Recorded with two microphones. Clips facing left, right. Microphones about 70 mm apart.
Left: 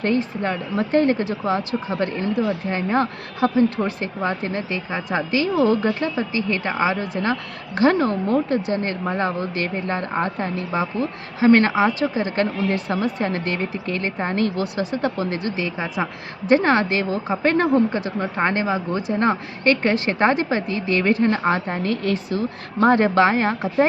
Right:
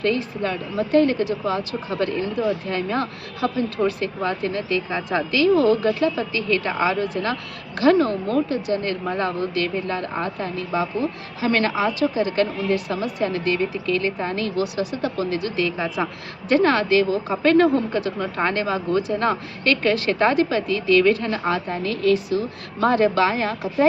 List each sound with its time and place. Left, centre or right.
0.0 s a woman's voice: left